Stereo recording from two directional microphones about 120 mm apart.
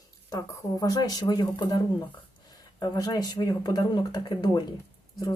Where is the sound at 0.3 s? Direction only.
30° left (ahead or behind).